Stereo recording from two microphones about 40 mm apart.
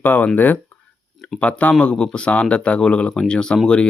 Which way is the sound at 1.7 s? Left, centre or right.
Left.